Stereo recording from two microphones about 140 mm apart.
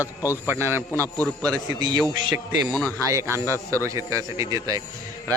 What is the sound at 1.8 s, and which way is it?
Speech, 30° right (ahead or behind).